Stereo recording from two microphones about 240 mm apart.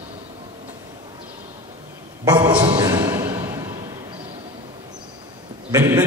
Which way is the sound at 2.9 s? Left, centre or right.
Centre.